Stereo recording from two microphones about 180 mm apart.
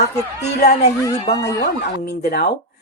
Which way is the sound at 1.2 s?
65° left (ahead or behind).